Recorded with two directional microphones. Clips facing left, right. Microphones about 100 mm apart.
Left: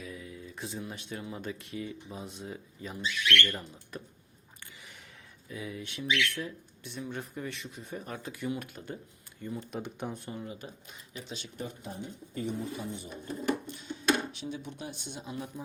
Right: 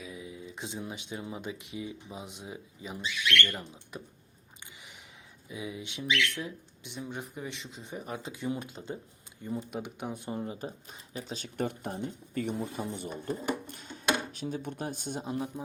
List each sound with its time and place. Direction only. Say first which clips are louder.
0.0 s a sound: right 1 dB; 15° right (ahead or behind)
1.3 s speech: even; 15° right (ahead or behind)
5.5 s speech: right 1 dB; 15° right (ahead or behind)
9.6 s speech: left 2 dB; 10° right (ahead or behind)
10.3 s speech: right 5 dB; 35° right (ahead or behind)
11.5 s speech: right 8 dB; 65° right (ahead or behind); by 15.4 s 40° right (ahead or behind)